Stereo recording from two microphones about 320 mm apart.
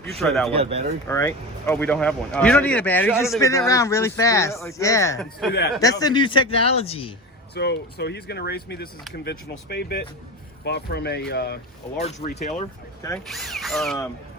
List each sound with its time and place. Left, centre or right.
0.0 s speech: centre
0.5 s speech: centre
1.0 s speech: centre
5.5 s speech: left
5.8 s speech: centre
7.5 s speech: left
11.9 s speech: centre
13.0 s speech: centre